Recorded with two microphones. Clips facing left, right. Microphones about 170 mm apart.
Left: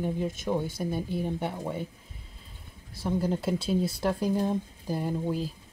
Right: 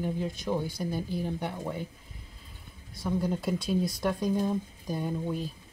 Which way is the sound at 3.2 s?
30° left (ahead or behind).